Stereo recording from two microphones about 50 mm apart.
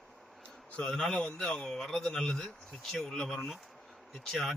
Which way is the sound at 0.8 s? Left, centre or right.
Centre.